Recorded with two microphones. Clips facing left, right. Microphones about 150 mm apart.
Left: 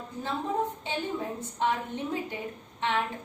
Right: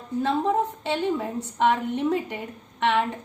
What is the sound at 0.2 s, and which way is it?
A woman's voice, 75° right (ahead or behind).